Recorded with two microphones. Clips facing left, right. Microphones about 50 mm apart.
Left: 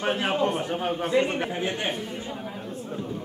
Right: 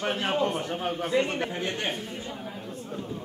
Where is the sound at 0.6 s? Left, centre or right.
Centre.